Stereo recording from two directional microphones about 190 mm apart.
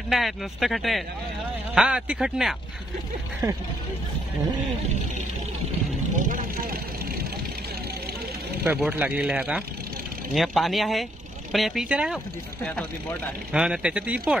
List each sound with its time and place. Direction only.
0.1 s speech: centre (ahead or behind)
3.4 s speech: 20° right (ahead or behind)
6.1 s speech: 45° right (ahead or behind)
8.6 s speech: 10° right (ahead or behind)
13.5 s speech: 5° right (ahead or behind)